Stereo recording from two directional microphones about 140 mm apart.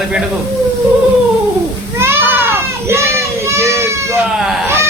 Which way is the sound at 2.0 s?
15° right (ahead or behind).